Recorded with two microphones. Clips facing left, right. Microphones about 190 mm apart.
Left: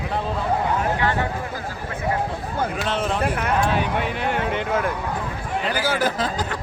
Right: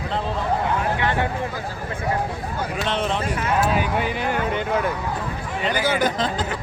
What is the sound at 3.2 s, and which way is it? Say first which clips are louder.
Speech: left 2 dB; 60° left (ahead or behind).